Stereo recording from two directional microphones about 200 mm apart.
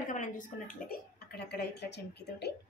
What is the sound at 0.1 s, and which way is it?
A woman's voice, 40° left (ahead or behind).